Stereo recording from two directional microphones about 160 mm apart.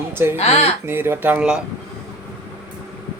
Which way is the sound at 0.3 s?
40° left (ahead or behind).